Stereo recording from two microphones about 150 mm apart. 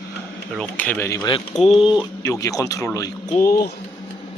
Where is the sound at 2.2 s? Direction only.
20° left (ahead or behind).